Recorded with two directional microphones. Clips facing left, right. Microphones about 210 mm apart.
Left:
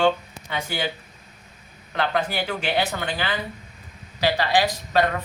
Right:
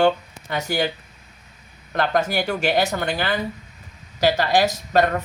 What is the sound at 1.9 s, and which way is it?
Speech, 45° right (ahead or behind).